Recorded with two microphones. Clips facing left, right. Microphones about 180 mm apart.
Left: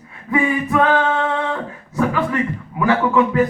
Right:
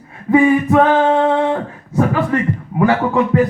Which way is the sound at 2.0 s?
45° right (ahead or behind).